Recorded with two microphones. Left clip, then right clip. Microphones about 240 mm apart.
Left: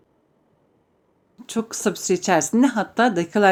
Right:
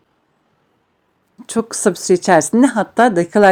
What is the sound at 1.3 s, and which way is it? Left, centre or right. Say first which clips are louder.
Speech: right 7 dB; right.